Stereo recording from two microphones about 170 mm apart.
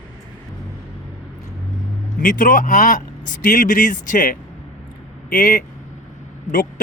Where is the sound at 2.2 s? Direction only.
50° left (ahead or behind).